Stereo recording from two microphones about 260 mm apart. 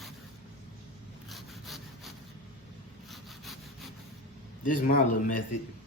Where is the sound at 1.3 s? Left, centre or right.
Centre.